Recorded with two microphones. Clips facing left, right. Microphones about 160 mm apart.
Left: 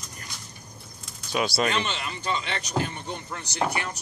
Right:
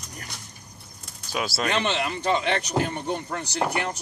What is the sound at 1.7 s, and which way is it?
Speech, 60° right (ahead or behind).